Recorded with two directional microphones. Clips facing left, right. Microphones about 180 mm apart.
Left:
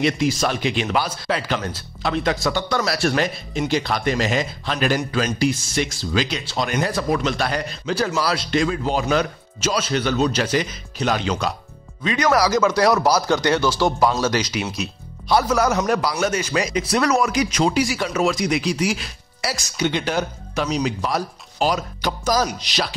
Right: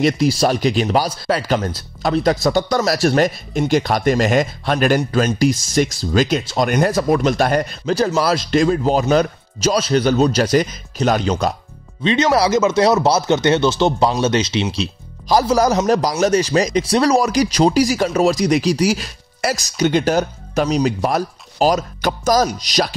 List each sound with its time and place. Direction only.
0.0 s speech: 35° right (ahead or behind)
12.0 s speech: 25° right (ahead or behind); by 22.9 s 40° right (ahead or behind)